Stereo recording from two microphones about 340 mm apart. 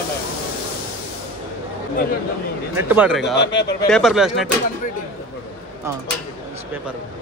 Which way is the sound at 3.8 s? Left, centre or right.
Centre.